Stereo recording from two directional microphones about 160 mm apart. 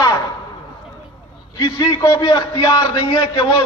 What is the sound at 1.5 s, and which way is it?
A man's voice, 25° left (ahead or behind).